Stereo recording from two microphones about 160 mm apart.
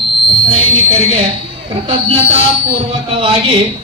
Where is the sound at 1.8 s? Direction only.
40° right (ahead or behind).